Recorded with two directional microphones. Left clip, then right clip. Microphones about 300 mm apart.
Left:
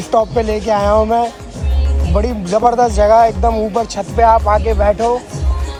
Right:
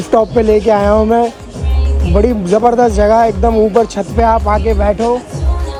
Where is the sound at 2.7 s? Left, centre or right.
Right.